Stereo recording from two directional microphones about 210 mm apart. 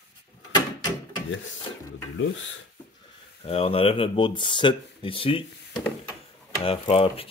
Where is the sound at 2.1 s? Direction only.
60° left (ahead or behind).